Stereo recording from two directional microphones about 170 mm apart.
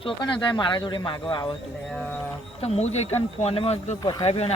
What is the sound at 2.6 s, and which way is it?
Speech, 40° left (ahead or behind).